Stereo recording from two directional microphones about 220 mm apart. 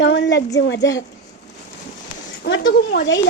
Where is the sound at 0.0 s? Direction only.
55° left (ahead or behind).